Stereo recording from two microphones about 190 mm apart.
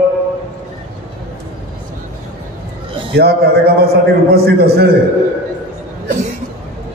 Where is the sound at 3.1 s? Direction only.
55° right (ahead or behind).